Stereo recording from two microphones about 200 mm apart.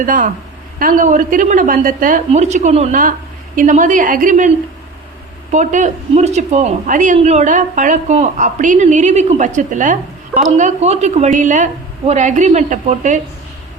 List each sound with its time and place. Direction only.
0.0 s speech: 40° right (ahead or behind)